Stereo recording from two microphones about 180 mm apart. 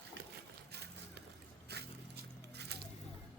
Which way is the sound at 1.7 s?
65° right (ahead or behind).